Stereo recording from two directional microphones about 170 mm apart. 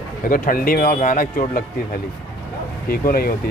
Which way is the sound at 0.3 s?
55° left (ahead or behind).